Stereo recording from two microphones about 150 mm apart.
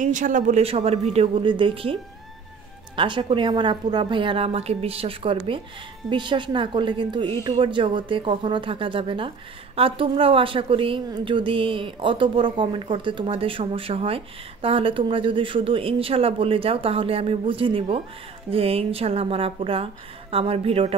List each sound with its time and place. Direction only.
0.0 s speech: 60° right (ahead or behind); by 2.0 s 35° right (ahead or behind)
3.0 s a woman's voice: 35° right (ahead or behind)